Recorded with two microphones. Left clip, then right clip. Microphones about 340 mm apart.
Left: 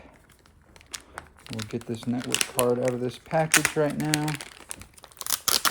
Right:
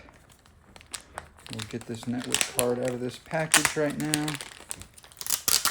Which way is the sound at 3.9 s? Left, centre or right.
Centre.